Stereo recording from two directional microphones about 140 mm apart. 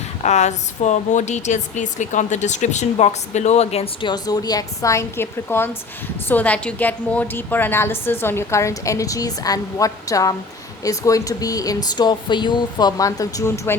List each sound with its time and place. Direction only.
0.2 s speech: 55° left (ahead or behind)
4.0 s a woman's voice: 30° left (ahead or behind)